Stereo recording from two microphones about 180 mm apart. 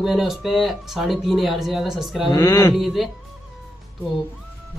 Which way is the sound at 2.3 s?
20° left (ahead or behind).